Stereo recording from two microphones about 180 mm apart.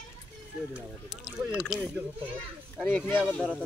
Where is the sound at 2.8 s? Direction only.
10° left (ahead or behind).